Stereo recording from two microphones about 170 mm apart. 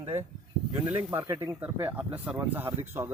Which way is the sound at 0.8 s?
10° right (ahead or behind).